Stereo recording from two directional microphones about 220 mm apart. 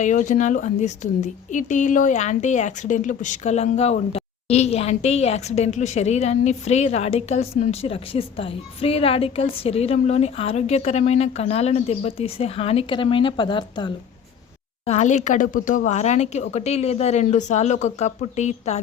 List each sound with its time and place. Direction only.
0.0 s speech: 35° left (ahead or behind)
14.8 s speech: 30° left (ahead or behind)